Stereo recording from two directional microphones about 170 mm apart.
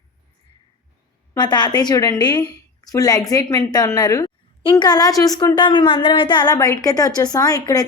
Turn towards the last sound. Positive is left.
turn(degrees=20)  # may be behind; listen again after turning